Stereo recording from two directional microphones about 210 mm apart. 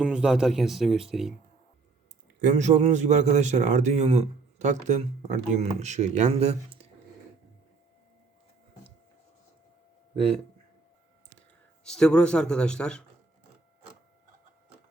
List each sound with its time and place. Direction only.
0.0 s speech: 5° right (ahead or behind)
2.4 s a man's voice: 35° right (ahead or behind)
11.8 s speech: 5° left (ahead or behind)